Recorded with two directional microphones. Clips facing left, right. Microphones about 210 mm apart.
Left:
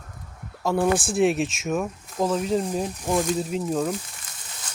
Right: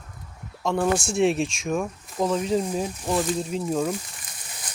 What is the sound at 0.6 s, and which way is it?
Speech, 5° left (ahead or behind).